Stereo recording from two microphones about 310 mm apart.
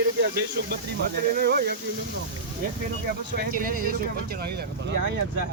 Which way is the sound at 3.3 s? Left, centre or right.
Right.